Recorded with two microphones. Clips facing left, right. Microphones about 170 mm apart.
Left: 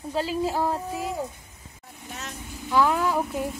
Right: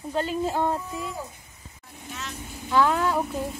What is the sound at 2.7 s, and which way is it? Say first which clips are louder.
Speech: even; 5° left (ahead or behind).